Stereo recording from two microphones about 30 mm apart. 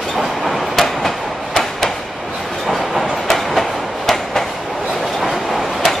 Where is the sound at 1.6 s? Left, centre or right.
Centre.